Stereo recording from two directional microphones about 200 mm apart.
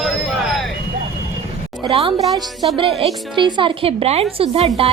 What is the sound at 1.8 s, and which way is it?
Music, 25° right (ahead or behind).